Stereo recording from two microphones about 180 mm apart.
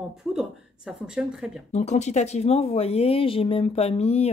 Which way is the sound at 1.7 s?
40° left (ahead or behind).